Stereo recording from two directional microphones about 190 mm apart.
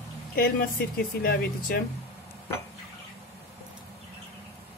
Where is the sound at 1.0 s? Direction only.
50° left (ahead or behind).